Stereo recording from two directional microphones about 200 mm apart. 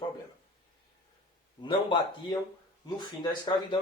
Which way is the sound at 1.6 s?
25° left (ahead or behind).